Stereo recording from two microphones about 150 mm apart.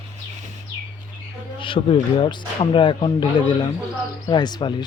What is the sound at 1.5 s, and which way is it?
Speech, 35° left (ahead or behind).